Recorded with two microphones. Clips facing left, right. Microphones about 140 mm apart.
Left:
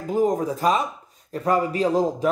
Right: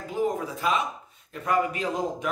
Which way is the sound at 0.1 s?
40° left (ahead or behind).